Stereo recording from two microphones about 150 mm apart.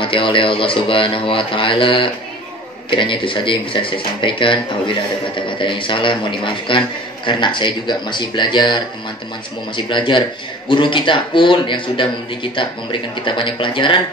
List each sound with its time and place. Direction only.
0.0 s speech: 35° left (ahead or behind)